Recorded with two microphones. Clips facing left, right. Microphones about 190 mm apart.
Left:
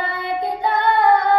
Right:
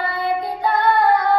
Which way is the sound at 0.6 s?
25° left (ahead or behind).